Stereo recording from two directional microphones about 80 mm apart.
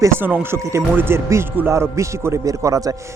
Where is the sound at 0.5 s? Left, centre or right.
Right.